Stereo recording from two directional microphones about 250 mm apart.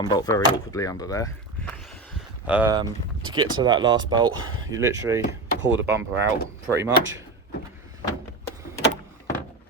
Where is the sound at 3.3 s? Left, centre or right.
Centre.